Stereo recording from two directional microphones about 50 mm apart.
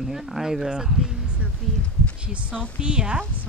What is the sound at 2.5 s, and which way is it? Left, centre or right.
Speech, right.